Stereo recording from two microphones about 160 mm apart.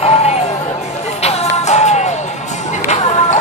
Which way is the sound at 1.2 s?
45° left (ahead or behind).